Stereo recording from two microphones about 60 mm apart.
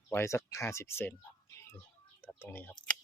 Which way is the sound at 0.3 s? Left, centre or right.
Left.